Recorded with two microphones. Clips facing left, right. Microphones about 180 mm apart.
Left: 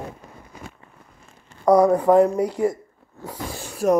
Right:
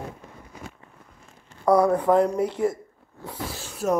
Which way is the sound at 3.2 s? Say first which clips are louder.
Left 2 dB; 10° left (ahead or behind).